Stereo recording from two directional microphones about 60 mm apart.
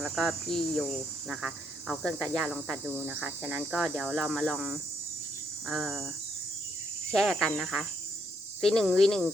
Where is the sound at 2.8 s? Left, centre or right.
Left.